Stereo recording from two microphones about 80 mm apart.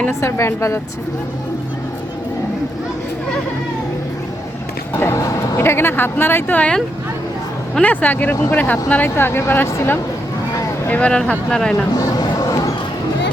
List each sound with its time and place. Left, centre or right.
0.1 s a woman's voice: left
4.9 s a woman's voice: left; by 8.8 s centre
9.0 s speech: left; by 11.7 s centre
11.9 s music: left